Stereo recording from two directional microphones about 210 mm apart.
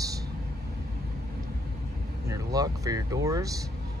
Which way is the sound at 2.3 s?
15° right (ahead or behind).